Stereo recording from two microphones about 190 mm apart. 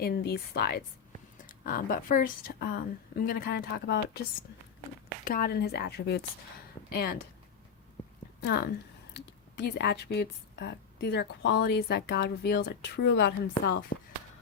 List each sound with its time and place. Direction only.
0.0 s a woman's voice: 55° left (ahead or behind)
5.2 s a woman's voice: 50° left (ahead or behind)
8.4 s a woman's voice: 60° left (ahead or behind)